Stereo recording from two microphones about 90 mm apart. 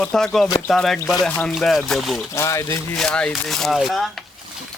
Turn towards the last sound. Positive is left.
turn(degrees=0)  # may be behind; listen again after turning